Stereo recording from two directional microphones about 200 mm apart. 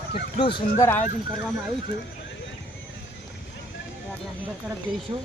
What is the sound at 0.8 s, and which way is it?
Speech, 10° left (ahead or behind).